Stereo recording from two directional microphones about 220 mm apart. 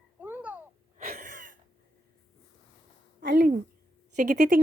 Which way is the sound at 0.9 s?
35° right (ahead or behind).